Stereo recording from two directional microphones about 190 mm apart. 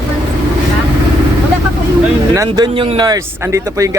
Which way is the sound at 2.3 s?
20° right (ahead or behind).